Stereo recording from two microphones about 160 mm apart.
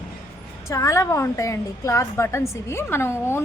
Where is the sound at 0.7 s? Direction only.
20° left (ahead or behind).